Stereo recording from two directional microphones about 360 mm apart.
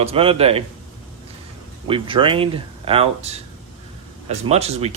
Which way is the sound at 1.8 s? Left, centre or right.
Centre.